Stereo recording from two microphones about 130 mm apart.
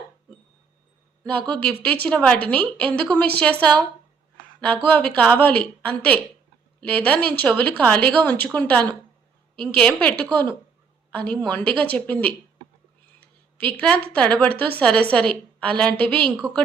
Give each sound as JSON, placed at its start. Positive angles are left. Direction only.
{"t": 1.4, "sound": "a woman's voice", "side_deg": -45}
{"t": 1.7, "sound": "speech", "side_deg": 10}
{"t": 4.9, "sound": "speech", "side_deg": 10}